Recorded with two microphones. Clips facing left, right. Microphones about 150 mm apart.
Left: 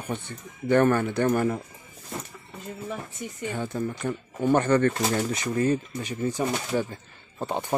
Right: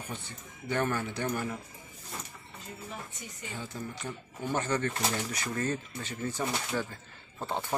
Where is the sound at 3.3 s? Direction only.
60° left (ahead or behind).